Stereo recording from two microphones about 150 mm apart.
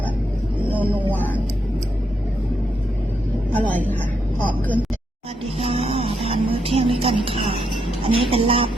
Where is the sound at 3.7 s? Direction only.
10° left (ahead or behind).